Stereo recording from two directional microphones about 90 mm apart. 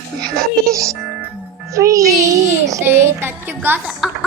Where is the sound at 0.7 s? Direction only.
35° right (ahead or behind).